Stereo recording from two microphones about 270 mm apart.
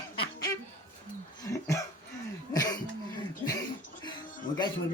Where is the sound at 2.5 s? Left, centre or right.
Centre.